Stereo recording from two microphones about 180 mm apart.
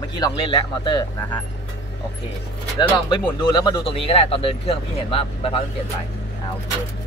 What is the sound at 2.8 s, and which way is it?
Speech, 25° left (ahead or behind).